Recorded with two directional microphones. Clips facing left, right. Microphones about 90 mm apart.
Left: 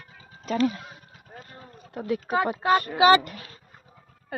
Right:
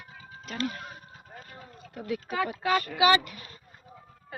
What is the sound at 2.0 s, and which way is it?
Speech, 45° left (ahead or behind).